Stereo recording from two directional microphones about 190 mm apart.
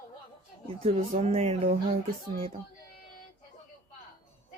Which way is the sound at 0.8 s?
35° right (ahead or behind).